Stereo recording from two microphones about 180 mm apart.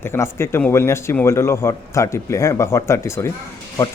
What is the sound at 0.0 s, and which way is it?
A man's voice, 15° left (ahead or behind).